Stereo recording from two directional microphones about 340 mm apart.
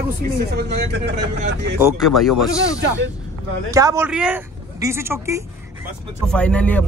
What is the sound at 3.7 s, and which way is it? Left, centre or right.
Speech, centre.